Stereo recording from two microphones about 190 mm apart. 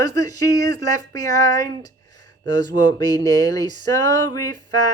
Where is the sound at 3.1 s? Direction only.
20° left (ahead or behind).